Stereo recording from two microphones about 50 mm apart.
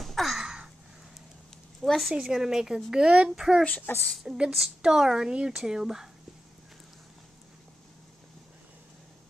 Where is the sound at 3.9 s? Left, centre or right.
Left.